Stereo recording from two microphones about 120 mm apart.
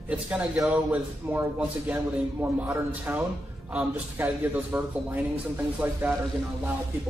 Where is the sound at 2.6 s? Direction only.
20° right (ahead or behind).